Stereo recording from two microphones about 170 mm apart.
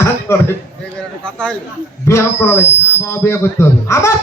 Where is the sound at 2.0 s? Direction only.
15° left (ahead or behind).